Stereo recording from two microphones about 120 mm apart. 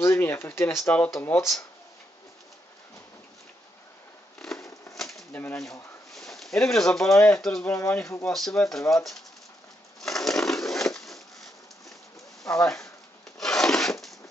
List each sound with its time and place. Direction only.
0.0 s speech: 20° left (ahead or behind)
4.4 s a sound: 5° left (ahead or behind)
4.9 s bird: centre (ahead or behind)
5.3 s speech: 15° left (ahead or behind)
6.1 s speech: 5° left (ahead or behind)
7.2 s speech: 15° left (ahead or behind)
7.4 s speech: 5° left (ahead or behind)
7.7 s speech: 20° left (ahead or behind)
8.3 s speech: 5° left (ahead or behind)
10.0 s crushing: 5° left (ahead or behind)
12.5 s speech: 5° left (ahead or behind)
13.4 s filing: 5° left (ahead or behind)